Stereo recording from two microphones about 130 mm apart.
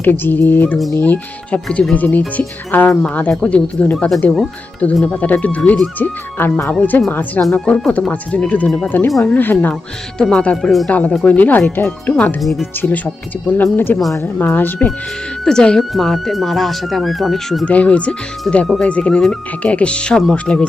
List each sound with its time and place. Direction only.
0.0 s speech: 15° left (ahead or behind)
12.4 s speech: centre (ahead or behind)
13.5 s speech: 15° left (ahead or behind)